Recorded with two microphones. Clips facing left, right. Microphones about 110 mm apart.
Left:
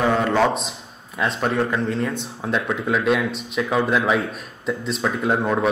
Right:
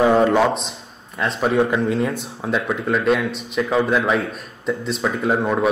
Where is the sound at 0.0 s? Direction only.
25° right (ahead or behind).